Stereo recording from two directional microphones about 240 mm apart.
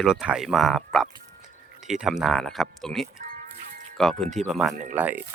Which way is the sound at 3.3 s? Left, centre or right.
Right.